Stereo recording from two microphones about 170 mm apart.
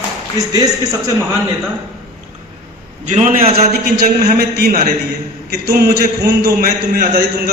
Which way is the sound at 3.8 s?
60° right (ahead or behind).